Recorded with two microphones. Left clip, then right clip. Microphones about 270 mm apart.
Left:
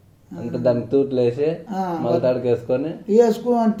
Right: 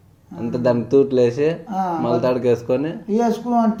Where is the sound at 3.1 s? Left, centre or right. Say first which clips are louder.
Left 4 dB; centre.